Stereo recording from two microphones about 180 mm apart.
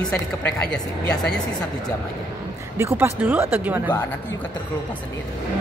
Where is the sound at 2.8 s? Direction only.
15° right (ahead or behind).